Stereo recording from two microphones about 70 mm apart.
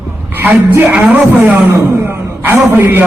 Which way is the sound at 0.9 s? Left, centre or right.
Right.